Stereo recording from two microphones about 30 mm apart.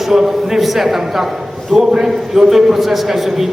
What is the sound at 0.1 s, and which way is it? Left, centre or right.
A man's voice, centre.